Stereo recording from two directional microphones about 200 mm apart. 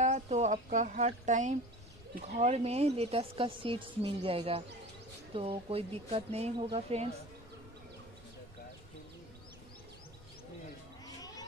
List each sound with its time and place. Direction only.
0.0 s a woman's voice: 35° right (ahead or behind)
11.1 s cat: 20° left (ahead or behind)